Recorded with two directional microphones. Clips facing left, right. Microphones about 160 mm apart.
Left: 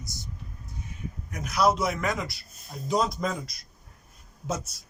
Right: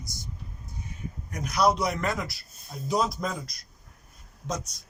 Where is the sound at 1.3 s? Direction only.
Centre (ahead or behind).